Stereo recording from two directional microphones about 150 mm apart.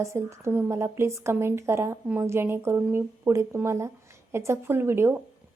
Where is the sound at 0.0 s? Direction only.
20° right (ahead or behind).